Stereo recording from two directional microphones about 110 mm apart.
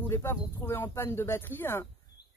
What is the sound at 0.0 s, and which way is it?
Speech, 20° left (ahead or behind).